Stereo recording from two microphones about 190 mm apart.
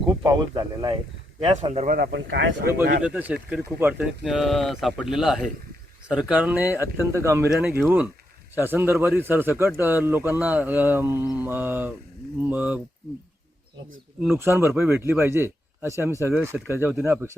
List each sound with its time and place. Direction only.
0.1 s speech: 20° right (ahead or behind)
1.9 s speech: 50° right (ahead or behind)
3.0 s a man's voice: 10° right (ahead or behind)
14.3 s a man's voice: 10° right (ahead or behind)